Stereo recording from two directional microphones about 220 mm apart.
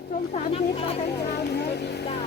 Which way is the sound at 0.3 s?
25° left (ahead or behind).